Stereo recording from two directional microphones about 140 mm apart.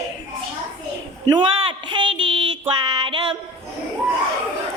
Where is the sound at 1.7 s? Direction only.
35° right (ahead or behind).